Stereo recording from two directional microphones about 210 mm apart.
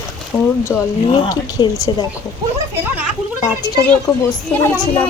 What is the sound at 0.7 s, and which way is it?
A child's voice, 15° left (ahead or behind).